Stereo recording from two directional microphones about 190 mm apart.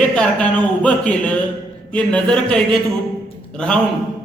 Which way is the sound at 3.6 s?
5° left (ahead or behind).